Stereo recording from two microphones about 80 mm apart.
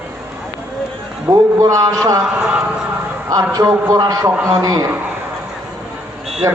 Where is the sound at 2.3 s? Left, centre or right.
Centre.